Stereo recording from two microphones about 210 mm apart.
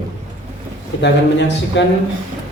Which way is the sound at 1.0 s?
55° left (ahead or behind).